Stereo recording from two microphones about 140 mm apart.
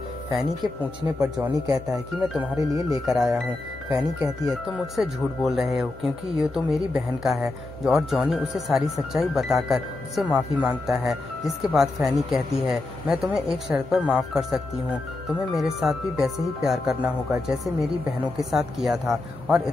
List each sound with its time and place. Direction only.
1.2 s speech: 5° right (ahead or behind)
2.5 s speech: 25° right (ahead or behind)
3.1 s speech: centre (ahead or behind)
18.4 s speech: centre (ahead or behind)